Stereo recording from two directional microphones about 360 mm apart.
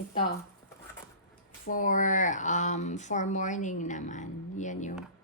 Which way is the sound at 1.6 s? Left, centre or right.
Left.